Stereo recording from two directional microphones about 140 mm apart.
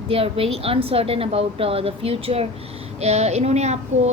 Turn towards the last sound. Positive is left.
turn(degrees=-50)  # may be behind; listen again after turning